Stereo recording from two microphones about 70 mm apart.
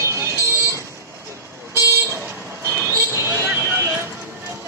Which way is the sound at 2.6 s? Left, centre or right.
Right.